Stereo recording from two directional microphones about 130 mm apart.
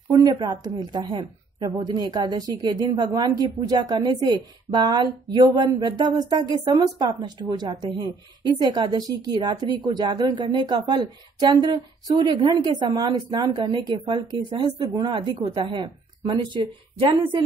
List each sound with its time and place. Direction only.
0.1 s a woman's voice: 30° right (ahead or behind)